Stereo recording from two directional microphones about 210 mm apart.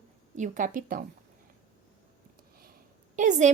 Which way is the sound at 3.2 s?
35° right (ahead or behind).